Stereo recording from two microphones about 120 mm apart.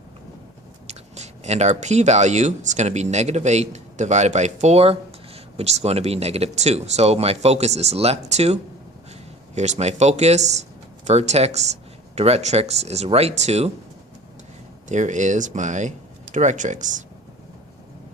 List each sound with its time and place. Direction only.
0.9 s speech: 70° right (ahead or behind)
9.6 s speech: 70° right (ahead or behind)
14.8 s speech: 90° right